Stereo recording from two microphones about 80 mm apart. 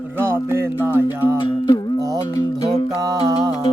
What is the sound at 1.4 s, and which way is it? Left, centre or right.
Music, left.